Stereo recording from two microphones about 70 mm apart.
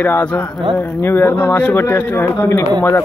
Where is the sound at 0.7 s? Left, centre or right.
Left.